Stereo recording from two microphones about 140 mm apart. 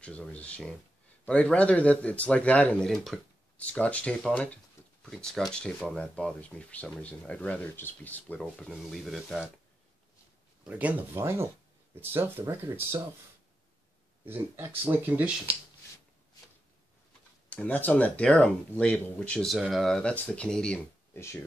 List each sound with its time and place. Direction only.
0.0 s speech: 10° left (ahead or behind)
8.4 s speech: centre (ahead or behind)
10.6 s speech: 10° right (ahead or behind)
14.2 s speech: 15° right (ahead or behind)
17.5 s speech: 10° left (ahead or behind)
21.1 s speech: 20° left (ahead or behind)